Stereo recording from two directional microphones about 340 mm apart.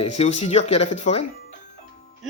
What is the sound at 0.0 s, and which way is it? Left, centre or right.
Speech, centre.